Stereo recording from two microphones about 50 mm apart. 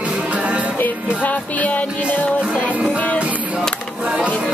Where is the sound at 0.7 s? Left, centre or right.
Left.